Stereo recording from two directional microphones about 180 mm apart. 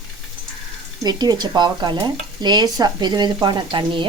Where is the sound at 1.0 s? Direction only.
20° right (ahead or behind).